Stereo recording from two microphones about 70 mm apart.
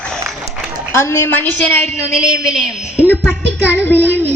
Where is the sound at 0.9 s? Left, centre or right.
Left.